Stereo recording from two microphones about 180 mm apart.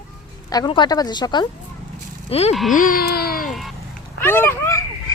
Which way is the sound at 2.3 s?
35° left (ahead or behind).